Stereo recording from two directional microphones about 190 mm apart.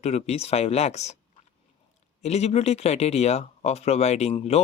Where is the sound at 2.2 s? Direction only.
35° left (ahead or behind).